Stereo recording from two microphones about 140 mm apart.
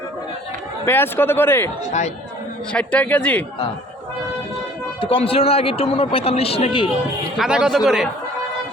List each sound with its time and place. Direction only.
0.9 s speech: 15° left (ahead or behind)
1.9 s speech: 55° left (ahead or behind)
2.7 s speech: 10° left (ahead or behind)
4.9 s a man's voice: 40° left (ahead or behind)
7.3 s speech: 5° right (ahead or behind)